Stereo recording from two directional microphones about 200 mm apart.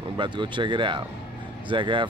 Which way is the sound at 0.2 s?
25° right (ahead or behind).